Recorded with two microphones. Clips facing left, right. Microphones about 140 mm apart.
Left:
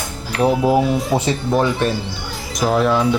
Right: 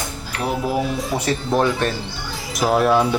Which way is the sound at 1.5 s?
10° left (ahead or behind).